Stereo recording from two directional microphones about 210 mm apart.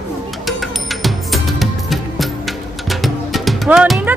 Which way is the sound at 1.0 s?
Centre (ahead or behind).